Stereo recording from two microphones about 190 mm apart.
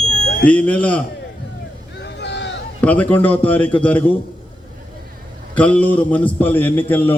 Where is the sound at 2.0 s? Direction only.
65° left (ahead or behind).